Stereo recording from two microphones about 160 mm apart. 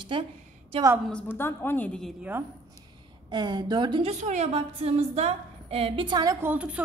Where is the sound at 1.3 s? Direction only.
15° left (ahead or behind).